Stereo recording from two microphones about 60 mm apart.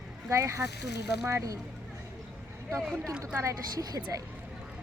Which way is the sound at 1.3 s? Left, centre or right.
Right.